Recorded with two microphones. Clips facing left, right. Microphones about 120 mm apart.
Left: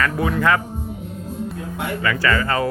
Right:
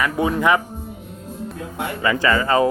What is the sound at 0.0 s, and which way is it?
Speech, 20° right (ahead or behind).